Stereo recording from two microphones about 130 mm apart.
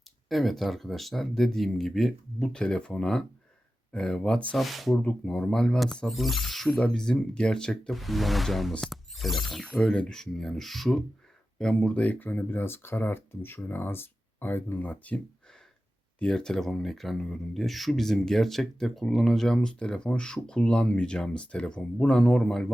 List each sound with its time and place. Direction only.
0.3 s speech: centre (ahead or behind)